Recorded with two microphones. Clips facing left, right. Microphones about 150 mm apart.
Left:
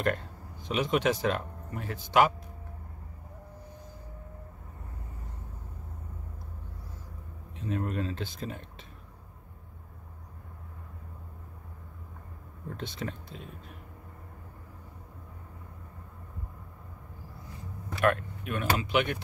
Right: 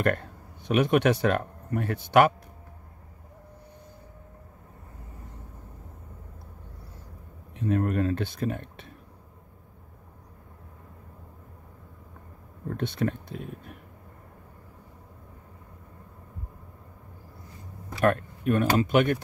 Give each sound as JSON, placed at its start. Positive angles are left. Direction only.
{"t": 0.7, "sound": "speech", "side_deg": -60}
{"t": 7.6, "sound": "speech", "side_deg": -55}
{"t": 12.7, "sound": "speech", "side_deg": -60}
{"t": 18.0, "sound": "speech", "side_deg": -40}